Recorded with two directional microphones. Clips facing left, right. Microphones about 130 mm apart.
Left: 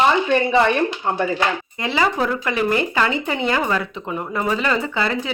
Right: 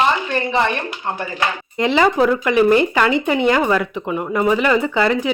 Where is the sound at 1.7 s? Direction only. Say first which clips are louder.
Right 5 dB; 20° right (ahead or behind).